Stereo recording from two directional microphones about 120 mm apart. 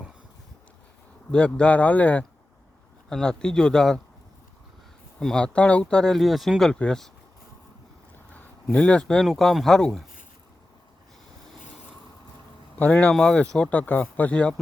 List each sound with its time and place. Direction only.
1.3 s speech: 10° left (ahead or behind)
5.2 s speech: 5° left (ahead or behind)
8.3 s speech: 10° left (ahead or behind)
12.8 s speech: 10° left (ahead or behind)